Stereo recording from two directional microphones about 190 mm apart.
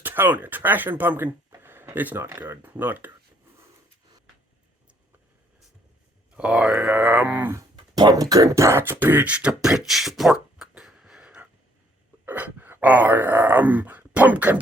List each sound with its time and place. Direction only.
0.0 s speech: 10° right (ahead or behind)
6.3 s speech: 5° right (ahead or behind)